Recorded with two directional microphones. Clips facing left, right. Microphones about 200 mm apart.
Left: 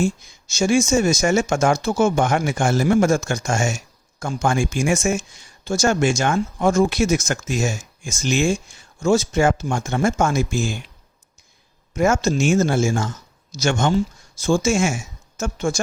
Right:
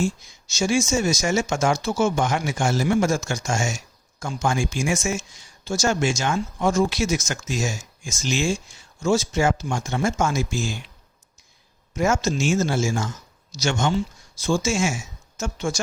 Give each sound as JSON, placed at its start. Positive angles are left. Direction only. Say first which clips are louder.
{"t": 0.0, "sound": "speech", "louder": "left 3 dB", "side_deg": 55}
{"t": 11.9, "sound": "speech", "louder": "left 4 dB", "side_deg": 55}